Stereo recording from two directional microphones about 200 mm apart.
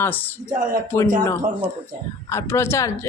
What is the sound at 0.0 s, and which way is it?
Speech, 10° left (ahead or behind).